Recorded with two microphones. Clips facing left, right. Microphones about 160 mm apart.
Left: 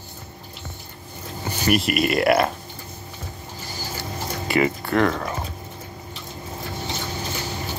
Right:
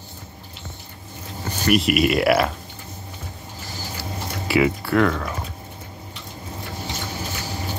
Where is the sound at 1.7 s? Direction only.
Centre (ahead or behind).